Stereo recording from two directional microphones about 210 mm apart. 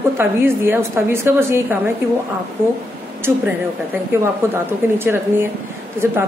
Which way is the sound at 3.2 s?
10° right (ahead or behind).